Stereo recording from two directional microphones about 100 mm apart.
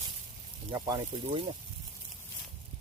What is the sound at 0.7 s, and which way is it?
Speech, 40° right (ahead or behind).